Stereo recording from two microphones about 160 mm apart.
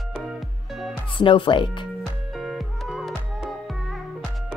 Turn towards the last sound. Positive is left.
turn(degrees=0)  # may be behind; listen again after turning